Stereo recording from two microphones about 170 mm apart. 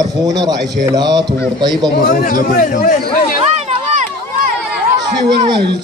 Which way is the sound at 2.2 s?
55° left (ahead or behind).